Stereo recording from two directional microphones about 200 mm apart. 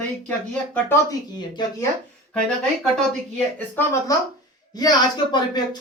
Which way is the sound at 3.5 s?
10° left (ahead or behind).